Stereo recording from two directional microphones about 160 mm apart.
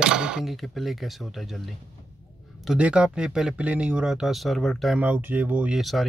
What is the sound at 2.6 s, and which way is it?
Speech, 5° right (ahead or behind).